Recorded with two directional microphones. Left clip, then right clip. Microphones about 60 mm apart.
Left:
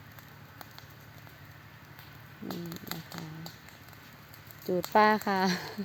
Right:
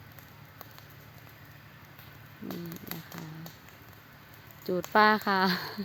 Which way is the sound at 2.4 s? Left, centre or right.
Centre.